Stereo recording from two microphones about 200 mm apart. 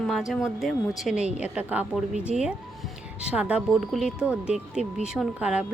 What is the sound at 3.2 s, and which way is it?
A woman's voice, 5° right (ahead or behind).